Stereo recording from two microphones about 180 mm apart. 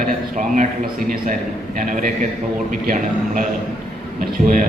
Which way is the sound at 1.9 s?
45° right (ahead or behind).